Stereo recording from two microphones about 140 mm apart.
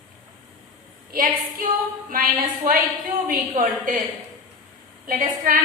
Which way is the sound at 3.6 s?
75° right (ahead or behind).